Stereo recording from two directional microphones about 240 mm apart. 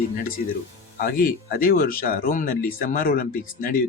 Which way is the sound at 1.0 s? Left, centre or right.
Left.